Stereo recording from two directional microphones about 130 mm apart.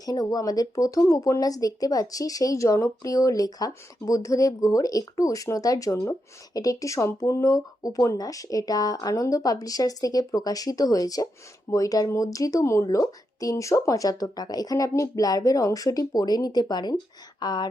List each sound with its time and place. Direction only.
0.0 s speech: 30° left (ahead or behind)